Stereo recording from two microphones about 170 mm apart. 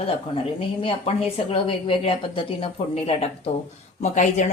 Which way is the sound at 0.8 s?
30° left (ahead or behind).